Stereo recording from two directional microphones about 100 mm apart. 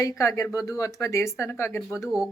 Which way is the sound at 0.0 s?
35° left (ahead or behind).